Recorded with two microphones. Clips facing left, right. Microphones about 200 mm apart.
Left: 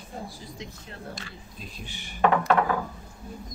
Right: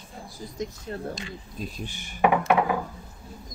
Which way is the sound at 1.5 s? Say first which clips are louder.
Right 7 dB; 45° right (ahead or behind).